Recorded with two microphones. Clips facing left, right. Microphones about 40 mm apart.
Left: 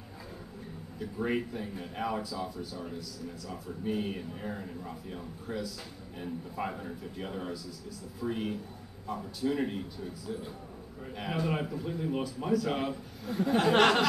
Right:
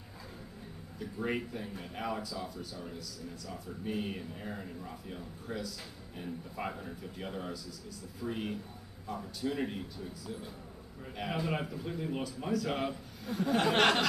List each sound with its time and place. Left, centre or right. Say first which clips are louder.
0.9 s speech: left 3 dB; centre
11.1 s speech: left 2 dB; centre
13.3 s speech: left 2 dB; left
13.6 s speech: left 3 dB; centre